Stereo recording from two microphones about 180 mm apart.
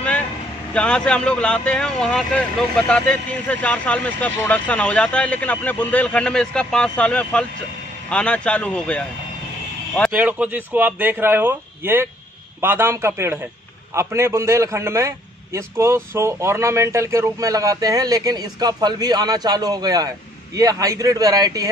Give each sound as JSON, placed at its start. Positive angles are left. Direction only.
{"t": 0.7, "sound": "speech", "side_deg": 5}
{"t": 10.1, "sound": "a man's voice", "side_deg": -10}